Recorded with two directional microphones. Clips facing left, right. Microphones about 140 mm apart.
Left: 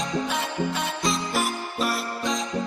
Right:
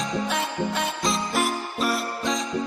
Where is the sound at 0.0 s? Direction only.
Centre (ahead or behind).